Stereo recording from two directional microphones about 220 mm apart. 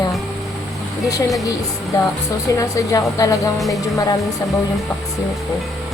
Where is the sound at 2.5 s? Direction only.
15° left (ahead or behind).